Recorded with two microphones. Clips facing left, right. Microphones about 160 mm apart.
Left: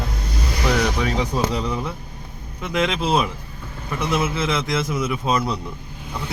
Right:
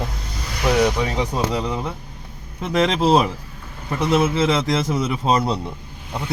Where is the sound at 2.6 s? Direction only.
35° right (ahead or behind).